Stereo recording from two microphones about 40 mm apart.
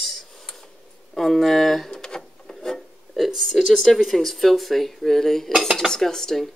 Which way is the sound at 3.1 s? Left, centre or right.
Centre.